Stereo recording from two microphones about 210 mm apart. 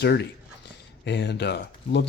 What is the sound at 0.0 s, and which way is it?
Speech, 50° left (ahead or behind).